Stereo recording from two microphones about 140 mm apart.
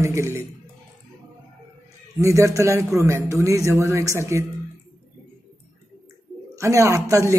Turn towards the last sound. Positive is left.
turn(degrees=-20)  # may be behind; listen again after turning